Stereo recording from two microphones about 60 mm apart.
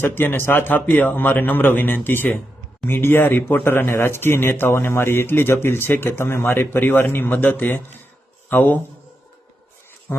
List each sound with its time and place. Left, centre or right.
0.0 s speech: left
10.1 s speech: left